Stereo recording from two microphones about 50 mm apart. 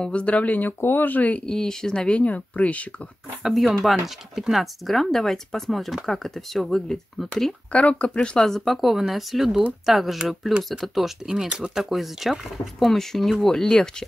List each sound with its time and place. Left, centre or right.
0.0 s speech: left
0.7 s speech: left
1.4 s speech: centre
3.4 s speech: centre
7.7 s speech: left
8.5 s speech: centre
12.7 s speech: centre